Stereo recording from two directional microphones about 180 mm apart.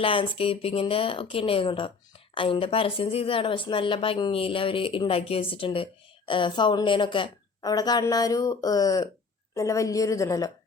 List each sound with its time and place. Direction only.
0.0 s a woman's voice: 30° left (ahead or behind)